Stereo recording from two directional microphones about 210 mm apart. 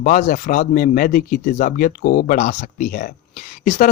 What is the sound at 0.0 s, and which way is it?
Speech, 40° left (ahead or behind).